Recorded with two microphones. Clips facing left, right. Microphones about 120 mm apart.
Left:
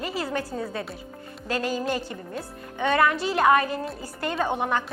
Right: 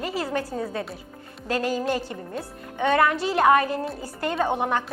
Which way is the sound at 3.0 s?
45° right (ahead or behind).